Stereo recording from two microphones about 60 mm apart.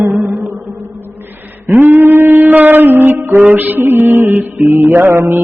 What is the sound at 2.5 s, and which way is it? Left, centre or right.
Music, right.